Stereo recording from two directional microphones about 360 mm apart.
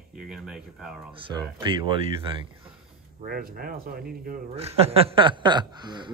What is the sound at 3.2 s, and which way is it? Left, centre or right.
A man's voice, right.